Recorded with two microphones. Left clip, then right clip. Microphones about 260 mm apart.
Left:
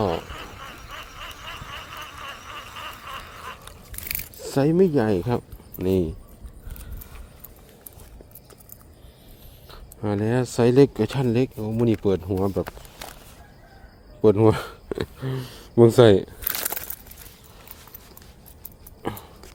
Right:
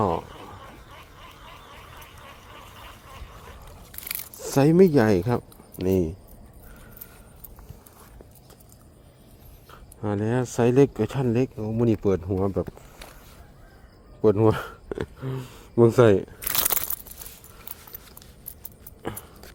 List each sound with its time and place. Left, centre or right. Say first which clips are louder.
0.9 s snicker: left 8 dB; left
4.4 s speech: right 2 dB; centre
9.6 s speech: left 2 dB; centre
14.2 s speech: left 2 dB; centre
16.6 s a sound: right 3 dB; right